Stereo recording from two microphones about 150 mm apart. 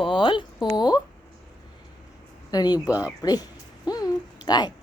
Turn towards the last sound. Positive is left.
turn(degrees=30)  # may be behind; listen again after turning